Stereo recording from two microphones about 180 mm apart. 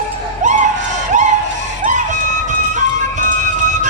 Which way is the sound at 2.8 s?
45° right (ahead or behind).